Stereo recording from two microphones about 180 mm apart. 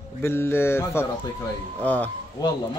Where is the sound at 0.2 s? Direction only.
15° left (ahead or behind).